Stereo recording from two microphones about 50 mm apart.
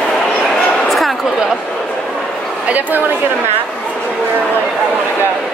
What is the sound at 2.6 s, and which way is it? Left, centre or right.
Speech, right.